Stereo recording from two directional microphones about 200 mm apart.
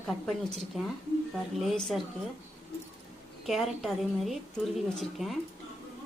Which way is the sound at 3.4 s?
Centre (ahead or behind).